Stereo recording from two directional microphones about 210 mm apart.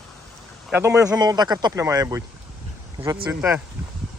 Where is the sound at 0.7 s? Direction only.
10° right (ahead or behind).